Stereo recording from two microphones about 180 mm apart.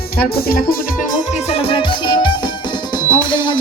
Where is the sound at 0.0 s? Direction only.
60° left (ahead or behind).